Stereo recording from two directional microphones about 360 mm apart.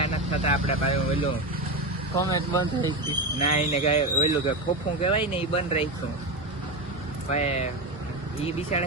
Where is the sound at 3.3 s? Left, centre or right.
Centre.